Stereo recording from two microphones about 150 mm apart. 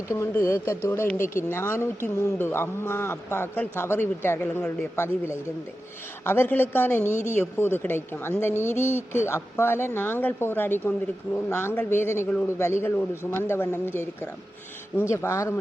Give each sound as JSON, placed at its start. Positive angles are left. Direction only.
{"t": 0.1, "sound": "speech", "side_deg": 20}
{"t": 7.1, "sound": "speech", "side_deg": 50}
{"t": 7.5, "sound": "speech", "side_deg": 15}